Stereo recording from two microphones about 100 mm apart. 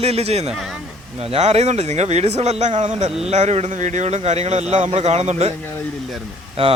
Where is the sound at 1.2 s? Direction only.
90° right.